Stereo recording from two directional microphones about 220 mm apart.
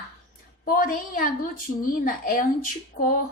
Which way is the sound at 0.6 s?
40° left (ahead or behind).